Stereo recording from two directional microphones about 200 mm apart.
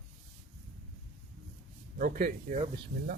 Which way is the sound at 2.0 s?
40° right (ahead or behind).